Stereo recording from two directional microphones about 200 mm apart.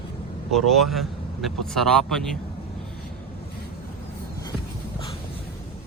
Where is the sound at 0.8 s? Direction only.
Centre (ahead or behind).